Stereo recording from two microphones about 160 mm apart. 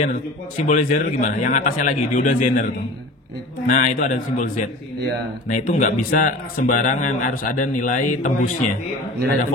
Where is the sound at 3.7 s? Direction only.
55° left (ahead or behind).